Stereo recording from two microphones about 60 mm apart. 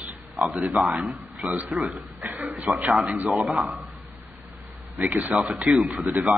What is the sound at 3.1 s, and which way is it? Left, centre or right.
Speech, right.